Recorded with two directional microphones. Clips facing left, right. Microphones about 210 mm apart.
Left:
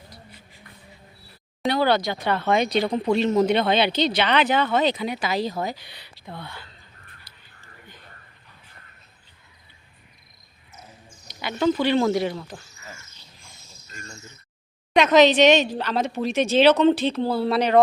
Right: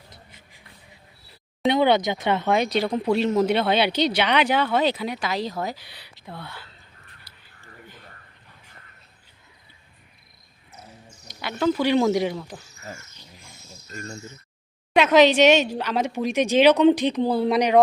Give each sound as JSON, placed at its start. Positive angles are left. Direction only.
{"t": 0.1, "sound": "shuffle", "side_deg": -20}
{"t": 1.6, "sound": "speech", "side_deg": -20}
{"t": 2.5, "sound": "speech", "side_deg": -5}
{"t": 7.3, "sound": "a sound", "side_deg": -10}
{"t": 11.3, "sound": "speech", "side_deg": 0}
{"t": 13.9, "sound": "speech", "side_deg": -35}
{"t": 14.9, "sound": "speech", "side_deg": -10}